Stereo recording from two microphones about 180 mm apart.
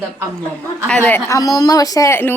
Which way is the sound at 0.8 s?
10° left (ahead or behind).